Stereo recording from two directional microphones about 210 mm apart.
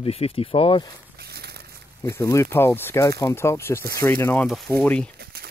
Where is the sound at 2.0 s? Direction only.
15° left (ahead or behind).